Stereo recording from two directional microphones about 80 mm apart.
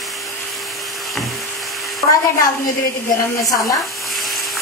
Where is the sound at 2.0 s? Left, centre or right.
Left.